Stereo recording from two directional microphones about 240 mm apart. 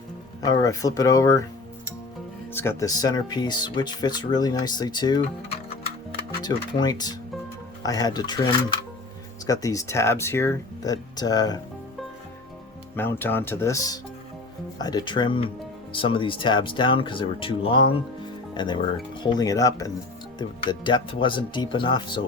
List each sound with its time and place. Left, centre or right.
0.4 s speech: centre
2.5 s speech: centre
6.4 s speech: centre
9.5 s speech: centre
13.0 s speech: centre